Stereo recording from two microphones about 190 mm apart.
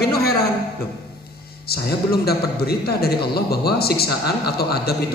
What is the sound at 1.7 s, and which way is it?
A man's voice, 55° left (ahead or behind).